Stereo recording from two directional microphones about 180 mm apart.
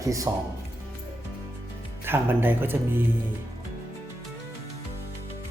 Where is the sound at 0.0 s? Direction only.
20° right (ahead or behind).